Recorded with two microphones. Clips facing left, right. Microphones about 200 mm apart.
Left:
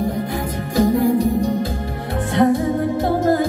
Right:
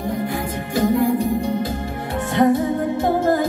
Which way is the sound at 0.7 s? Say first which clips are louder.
Left 2 dB; 45° left (ahead or behind).